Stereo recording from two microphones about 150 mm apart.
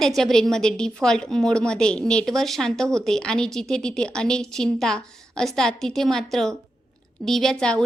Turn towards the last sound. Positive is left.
turn(degrees=5)  # may be behind; listen again after turning